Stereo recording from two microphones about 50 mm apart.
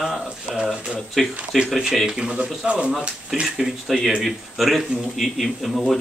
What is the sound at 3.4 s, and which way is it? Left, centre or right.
Speech, centre.